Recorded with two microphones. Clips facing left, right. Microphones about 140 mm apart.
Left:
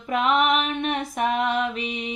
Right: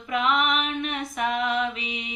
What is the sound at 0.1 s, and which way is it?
Female singing, 40° left (ahead or behind).